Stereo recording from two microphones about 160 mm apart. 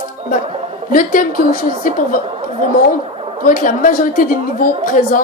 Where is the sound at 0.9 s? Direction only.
60° left (ahead or behind).